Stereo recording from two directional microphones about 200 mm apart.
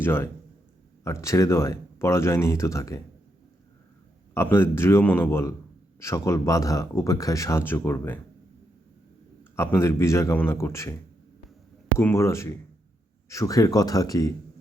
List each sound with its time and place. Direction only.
0.0 s a man's voice: 10° left (ahead or behind)
4.4 s speech: 10° left (ahead or behind)
9.4 s speech: 15° left (ahead or behind)
11.9 s speech: 15° left (ahead or behind)